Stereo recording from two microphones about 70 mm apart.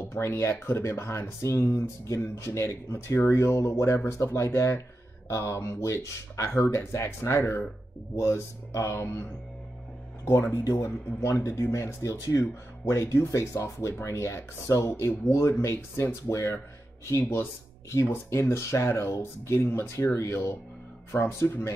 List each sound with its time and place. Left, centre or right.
0.0 s speech: left
10.9 s speech: left